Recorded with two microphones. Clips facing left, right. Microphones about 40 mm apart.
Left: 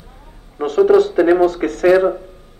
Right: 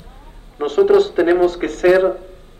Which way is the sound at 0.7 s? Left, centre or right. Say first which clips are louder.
Left 1 dB; right.